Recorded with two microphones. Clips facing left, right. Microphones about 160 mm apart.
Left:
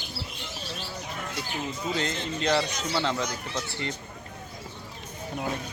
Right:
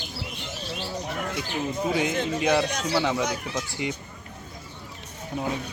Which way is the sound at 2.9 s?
10° right (ahead or behind).